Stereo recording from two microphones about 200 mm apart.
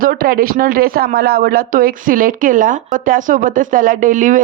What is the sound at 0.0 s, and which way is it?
Speech, 45° right (ahead or behind).